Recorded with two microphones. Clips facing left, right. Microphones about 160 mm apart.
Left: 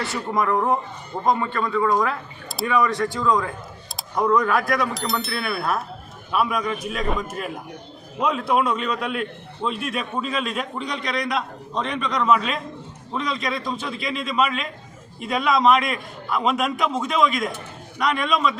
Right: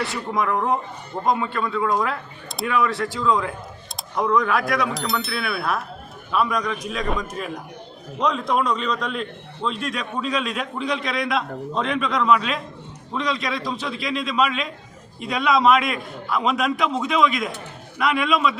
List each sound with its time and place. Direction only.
0.0 s a man's voice: centre (ahead or behind)